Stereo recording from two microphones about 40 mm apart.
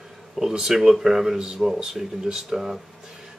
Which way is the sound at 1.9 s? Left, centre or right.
Centre.